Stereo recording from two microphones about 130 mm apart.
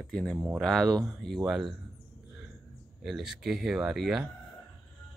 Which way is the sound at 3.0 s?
5° right (ahead or behind).